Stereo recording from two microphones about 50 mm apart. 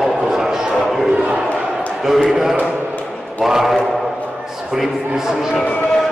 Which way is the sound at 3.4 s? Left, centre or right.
Centre.